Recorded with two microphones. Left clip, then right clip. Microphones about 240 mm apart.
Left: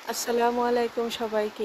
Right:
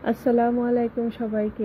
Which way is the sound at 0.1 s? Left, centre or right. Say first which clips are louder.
Right 3 dB; centre.